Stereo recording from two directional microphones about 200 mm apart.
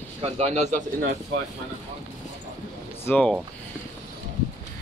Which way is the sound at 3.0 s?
5° left (ahead or behind).